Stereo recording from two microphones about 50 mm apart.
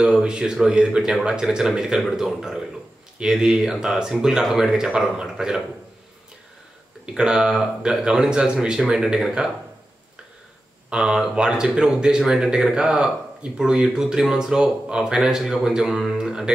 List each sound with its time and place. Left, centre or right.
0.0 s speech: centre
7.2 s speech: centre
10.9 s speech: centre
16.2 s music: centre